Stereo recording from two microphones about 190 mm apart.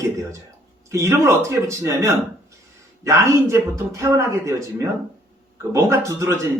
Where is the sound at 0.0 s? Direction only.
15° right (ahead or behind).